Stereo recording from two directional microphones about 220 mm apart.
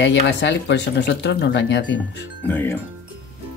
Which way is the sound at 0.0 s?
55° left (ahead or behind).